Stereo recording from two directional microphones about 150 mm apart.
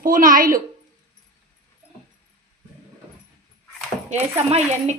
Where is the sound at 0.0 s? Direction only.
70° right (ahead or behind).